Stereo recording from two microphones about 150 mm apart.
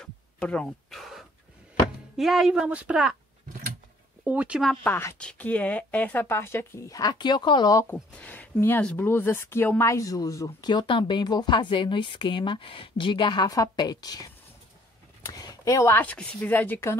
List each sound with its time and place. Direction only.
0.0 s a sound: 5° left (ahead or behind)
2.1 s a woman's voice: centre (ahead or behind)
4.2 s speech: 10° right (ahead or behind)
4.8 s a woman's voice: 15° left (ahead or behind)
7.9 s a woman's voice: 10° left (ahead or behind)